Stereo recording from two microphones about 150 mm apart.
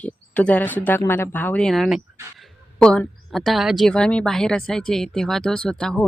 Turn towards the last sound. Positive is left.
turn(degrees=5)  # may be behind; listen again after turning